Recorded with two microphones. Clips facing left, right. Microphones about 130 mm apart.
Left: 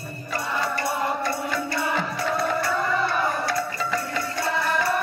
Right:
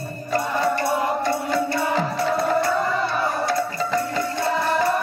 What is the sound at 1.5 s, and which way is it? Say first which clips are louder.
Music: right 4 dB; 30° right (ahead or behind).